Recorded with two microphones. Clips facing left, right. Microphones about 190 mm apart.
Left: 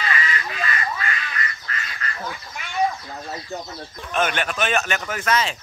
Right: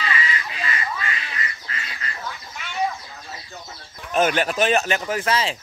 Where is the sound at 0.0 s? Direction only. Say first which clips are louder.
Left 1 dB; 25° right (ahead or behind).